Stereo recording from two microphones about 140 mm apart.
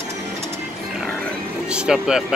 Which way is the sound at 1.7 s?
5° right (ahead or behind).